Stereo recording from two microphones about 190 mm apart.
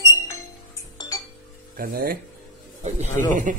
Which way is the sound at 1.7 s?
50° right (ahead or behind).